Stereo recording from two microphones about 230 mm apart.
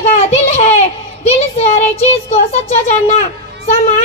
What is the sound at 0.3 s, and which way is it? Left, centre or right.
Child singing, left.